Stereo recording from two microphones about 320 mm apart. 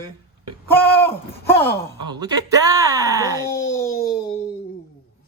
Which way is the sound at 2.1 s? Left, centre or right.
Centre.